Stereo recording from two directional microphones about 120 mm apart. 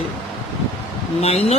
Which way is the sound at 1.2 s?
60° left (ahead or behind).